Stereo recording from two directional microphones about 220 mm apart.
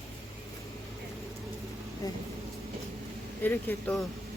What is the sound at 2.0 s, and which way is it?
Speech, 15° left (ahead or behind).